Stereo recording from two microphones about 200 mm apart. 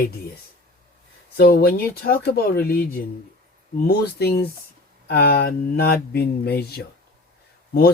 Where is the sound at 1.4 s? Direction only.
50° left (ahead or behind).